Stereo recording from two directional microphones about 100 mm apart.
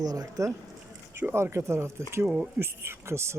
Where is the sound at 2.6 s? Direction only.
25° right (ahead or behind).